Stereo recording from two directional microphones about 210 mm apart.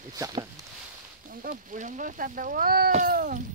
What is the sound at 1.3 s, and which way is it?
Speech, 40° right (ahead or behind).